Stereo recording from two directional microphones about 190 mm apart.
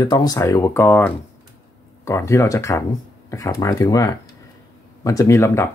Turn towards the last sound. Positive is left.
turn(degrees=15)  # may be behind; listen again after turning